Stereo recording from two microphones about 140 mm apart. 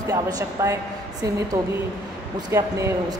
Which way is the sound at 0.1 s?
25° right (ahead or behind).